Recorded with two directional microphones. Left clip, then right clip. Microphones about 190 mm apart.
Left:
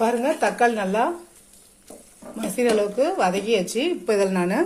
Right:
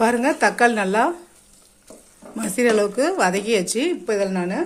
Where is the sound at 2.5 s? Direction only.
25° right (ahead or behind).